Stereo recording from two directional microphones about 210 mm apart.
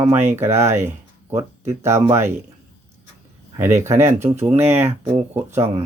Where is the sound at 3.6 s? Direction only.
10° right (ahead or behind).